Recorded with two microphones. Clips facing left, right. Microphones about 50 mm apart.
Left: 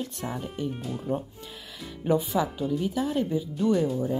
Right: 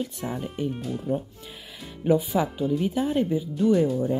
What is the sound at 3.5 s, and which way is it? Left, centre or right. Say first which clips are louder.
Speech: right 3 dB; centre.